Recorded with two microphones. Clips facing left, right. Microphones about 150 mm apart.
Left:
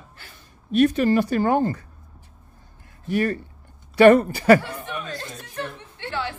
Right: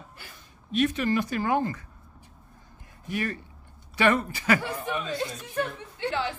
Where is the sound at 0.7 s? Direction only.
40° left (ahead or behind).